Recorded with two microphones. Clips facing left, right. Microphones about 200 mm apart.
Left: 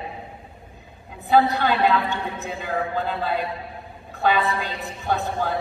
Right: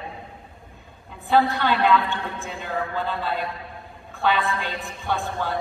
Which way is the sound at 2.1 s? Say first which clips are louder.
Left 2 dB; 40° left (ahead or behind).